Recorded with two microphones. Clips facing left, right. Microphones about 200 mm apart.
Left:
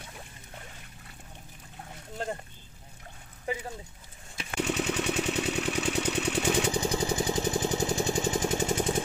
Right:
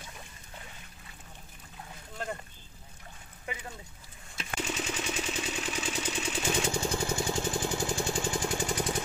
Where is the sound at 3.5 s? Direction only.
35° left (ahead or behind).